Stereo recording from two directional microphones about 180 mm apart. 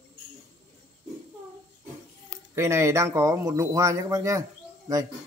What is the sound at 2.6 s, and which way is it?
Speech, 15° right (ahead or behind).